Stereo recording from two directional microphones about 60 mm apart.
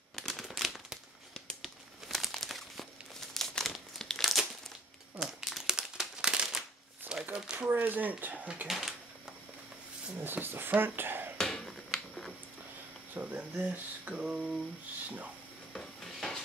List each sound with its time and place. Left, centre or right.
0.1 s crumpling: centre
7.1 s crumpling: right
7.5 s a sound: centre
7.8 s speech: right
8.6 s speech: centre
10.1 s speech: right
11.3 s finger snapping: centre
13.1 s speech: right
15.7 s stir: centre